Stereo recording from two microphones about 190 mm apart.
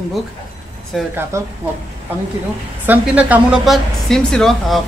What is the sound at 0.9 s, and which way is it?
Speech, centre (ahead or behind).